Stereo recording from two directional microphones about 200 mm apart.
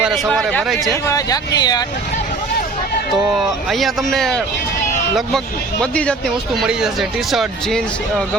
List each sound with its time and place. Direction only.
0.0 s speech: centre (ahead or behind)
1.0 s speech: 15° left (ahead or behind)
3.3 s speech: centre (ahead or behind)
5.8 s speech: 5° left (ahead or behind)